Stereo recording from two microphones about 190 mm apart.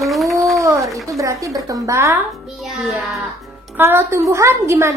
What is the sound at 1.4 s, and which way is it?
Speech, 20° right (ahead or behind).